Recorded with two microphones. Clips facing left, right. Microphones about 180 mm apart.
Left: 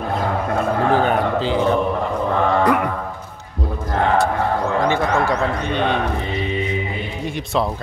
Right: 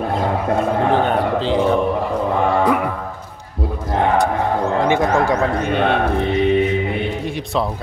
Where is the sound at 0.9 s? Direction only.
5° left (ahead or behind).